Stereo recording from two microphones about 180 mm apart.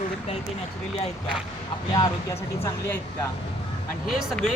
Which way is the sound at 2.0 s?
15° left (ahead or behind).